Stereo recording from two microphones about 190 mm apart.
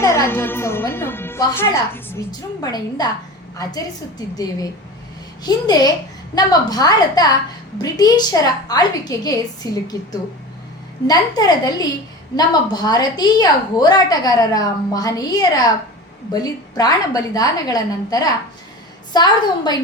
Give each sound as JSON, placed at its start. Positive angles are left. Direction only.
{"t": 0.0, "sound": "a woman's voice", "side_deg": 15}
{"t": 5.4, "sound": "a woman's voice", "side_deg": 20}
{"t": 11.0, "sound": "a woman's voice", "side_deg": 20}